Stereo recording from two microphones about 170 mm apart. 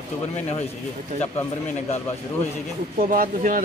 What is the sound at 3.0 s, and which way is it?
Speech, 55° right (ahead or behind).